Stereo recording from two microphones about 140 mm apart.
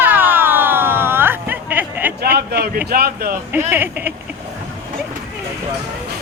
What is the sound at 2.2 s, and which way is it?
A man's voice, 90° right.